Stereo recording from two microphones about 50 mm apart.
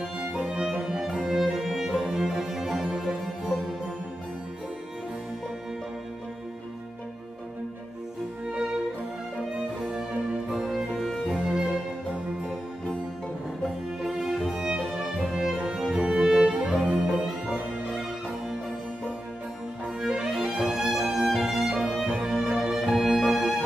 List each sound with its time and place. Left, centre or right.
0.0 s music: centre
9.6 s music: centre
11.3 s music: centre
14.0 s music: centre
20.0 s music: centre